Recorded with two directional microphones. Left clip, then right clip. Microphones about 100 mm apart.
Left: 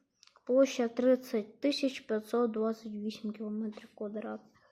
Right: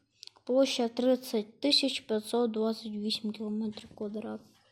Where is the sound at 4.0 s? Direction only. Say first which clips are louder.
Right 1 dB; 45° right (ahead or behind).